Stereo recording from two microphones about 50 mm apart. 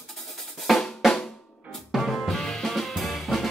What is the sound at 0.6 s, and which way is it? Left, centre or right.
Drum, centre.